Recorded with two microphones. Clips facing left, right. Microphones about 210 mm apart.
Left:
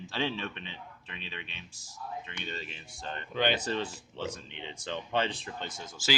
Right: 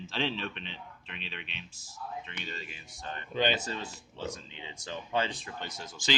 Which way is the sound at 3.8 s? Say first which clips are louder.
Left 4 dB; 65° left (ahead or behind).